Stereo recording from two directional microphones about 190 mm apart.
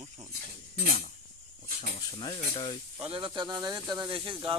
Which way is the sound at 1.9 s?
25° left (ahead or behind).